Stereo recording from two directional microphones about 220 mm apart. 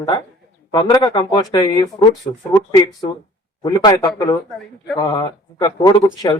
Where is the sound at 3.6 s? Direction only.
20° left (ahead or behind).